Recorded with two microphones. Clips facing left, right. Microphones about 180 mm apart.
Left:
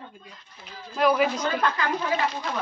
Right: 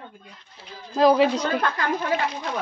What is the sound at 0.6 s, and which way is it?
Speech, 30° right (ahead or behind).